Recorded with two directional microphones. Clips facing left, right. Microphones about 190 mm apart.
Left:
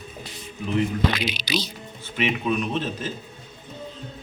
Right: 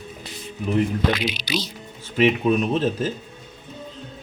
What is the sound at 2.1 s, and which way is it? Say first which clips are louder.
Speech: right 6 dB; 40° right (ahead or behind).